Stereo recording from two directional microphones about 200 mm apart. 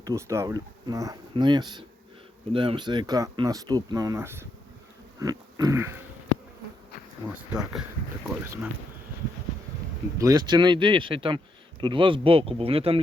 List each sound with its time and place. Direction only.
0.0 s speech: 15° right (ahead or behind)
5.2 s pig: 15° right (ahead or behind)
7.3 s speech: 5° right (ahead or behind)
10.2 s speech: 20° right (ahead or behind)